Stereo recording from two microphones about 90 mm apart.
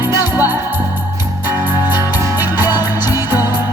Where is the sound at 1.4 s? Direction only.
25° right (ahead or behind).